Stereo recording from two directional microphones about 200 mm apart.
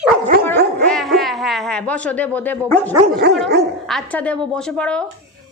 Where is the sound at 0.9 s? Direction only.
Centre (ahead or behind).